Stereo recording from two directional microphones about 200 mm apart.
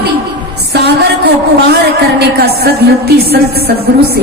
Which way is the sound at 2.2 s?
50° right (ahead or behind).